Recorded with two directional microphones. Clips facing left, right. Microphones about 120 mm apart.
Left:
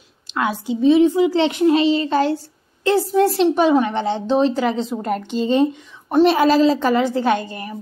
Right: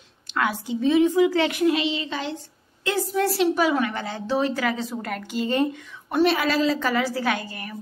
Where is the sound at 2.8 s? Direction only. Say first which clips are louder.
Left 7 dB; 30° left (ahead or behind).